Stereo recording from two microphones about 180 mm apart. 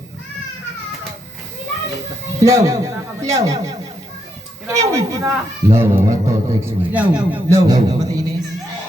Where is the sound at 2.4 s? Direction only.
15° right (ahead or behind).